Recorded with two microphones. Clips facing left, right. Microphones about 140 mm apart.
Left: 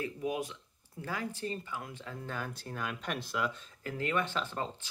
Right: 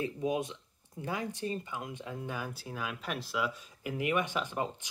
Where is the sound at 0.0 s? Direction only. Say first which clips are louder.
Right 3 dB; 25° right (ahead or behind).